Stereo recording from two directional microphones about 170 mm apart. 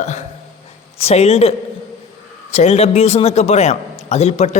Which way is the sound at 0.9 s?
40° left (ahead or behind).